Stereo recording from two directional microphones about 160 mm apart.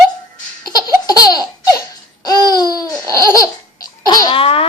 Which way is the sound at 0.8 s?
25° left (ahead or behind).